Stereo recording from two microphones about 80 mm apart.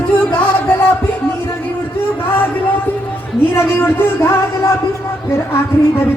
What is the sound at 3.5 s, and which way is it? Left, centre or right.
A woman's voice, left.